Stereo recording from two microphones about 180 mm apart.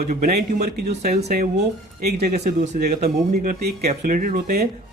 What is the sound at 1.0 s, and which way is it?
Speech, 35° right (ahead or behind).